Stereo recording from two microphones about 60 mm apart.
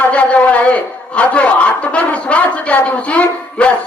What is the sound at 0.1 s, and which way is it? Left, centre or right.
Speech, left.